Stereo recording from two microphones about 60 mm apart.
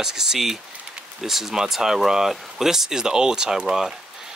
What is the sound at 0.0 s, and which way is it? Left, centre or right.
Speech, centre.